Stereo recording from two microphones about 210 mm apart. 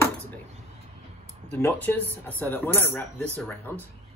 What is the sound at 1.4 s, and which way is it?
Speech, 5° left (ahead or behind).